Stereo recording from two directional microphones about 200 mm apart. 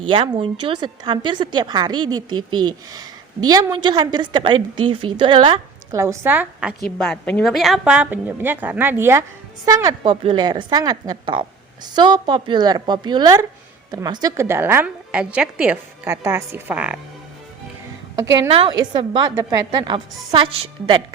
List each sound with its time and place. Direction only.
0.1 s a woman's voice: 25° right (ahead or behind); by 6.7 s 5° right (ahead or behind)
7.0 s a woman's voice: 5° left (ahead or behind)
18.4 s a woman's voice: 30° right (ahead or behind)
19.1 s a woman's voice: 15° right (ahead or behind)